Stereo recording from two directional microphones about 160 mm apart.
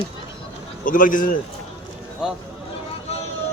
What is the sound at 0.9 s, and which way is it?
Speech, 55° left (ahead or behind).